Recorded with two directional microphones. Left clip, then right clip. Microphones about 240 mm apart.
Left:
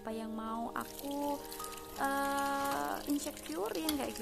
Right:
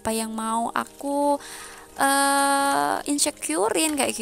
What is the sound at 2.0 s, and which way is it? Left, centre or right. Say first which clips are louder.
Speech: right 14 dB; right.